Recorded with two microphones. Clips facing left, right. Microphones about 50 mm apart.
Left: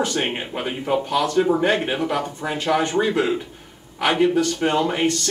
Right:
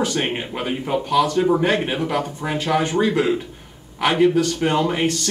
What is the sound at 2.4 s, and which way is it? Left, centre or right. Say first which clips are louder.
Speech: right 1 dB; right.